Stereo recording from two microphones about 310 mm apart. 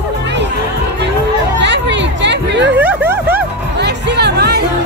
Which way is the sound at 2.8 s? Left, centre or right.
Centre.